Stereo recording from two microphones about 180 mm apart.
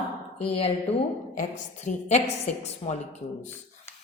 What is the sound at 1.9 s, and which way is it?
Speech, 45° left (ahead or behind).